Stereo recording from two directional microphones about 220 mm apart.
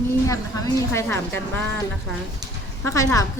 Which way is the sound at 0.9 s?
10° left (ahead or behind).